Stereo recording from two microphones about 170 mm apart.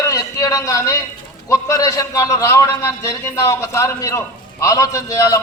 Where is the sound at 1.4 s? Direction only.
20° left (ahead or behind).